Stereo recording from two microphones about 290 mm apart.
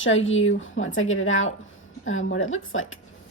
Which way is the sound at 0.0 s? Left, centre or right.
Left.